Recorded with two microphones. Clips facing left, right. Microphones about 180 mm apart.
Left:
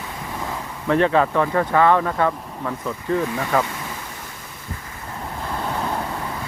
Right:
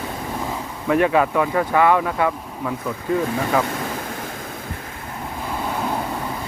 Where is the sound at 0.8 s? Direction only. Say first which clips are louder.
Even; 10° right (ahead or behind).